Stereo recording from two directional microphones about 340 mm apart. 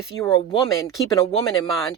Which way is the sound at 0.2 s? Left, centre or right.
Centre.